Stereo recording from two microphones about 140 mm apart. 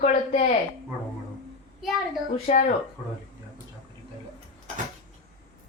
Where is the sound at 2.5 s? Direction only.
50° left (ahead or behind).